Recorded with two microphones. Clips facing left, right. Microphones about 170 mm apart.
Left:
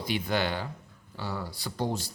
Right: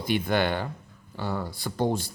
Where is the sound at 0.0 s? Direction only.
55° right (ahead or behind).